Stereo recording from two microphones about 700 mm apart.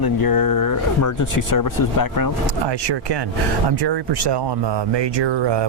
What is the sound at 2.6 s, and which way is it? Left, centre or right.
Speech, right.